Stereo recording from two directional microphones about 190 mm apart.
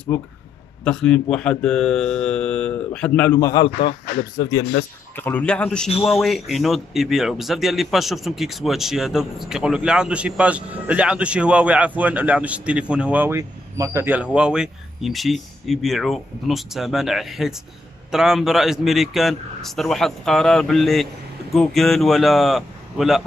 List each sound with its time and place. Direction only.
0.8 s a man's voice: 5° left (ahead or behind); by 3.7 s 20° left (ahead or behind)
3.8 s speech: 60° left (ahead or behind)
5.1 s a man's voice: 10° left (ahead or behind)